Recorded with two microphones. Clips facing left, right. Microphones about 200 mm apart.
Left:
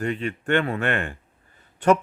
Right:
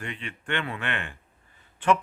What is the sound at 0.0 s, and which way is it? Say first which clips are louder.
Speech: left 11 dB; 45° left (ahead or behind).